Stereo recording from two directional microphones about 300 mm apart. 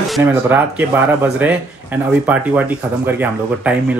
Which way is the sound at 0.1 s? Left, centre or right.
Centre.